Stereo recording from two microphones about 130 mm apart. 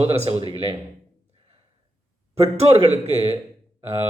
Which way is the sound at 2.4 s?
50° right (ahead or behind).